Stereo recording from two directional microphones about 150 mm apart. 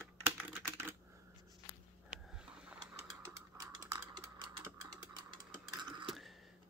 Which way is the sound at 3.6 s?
25° right (ahead or behind).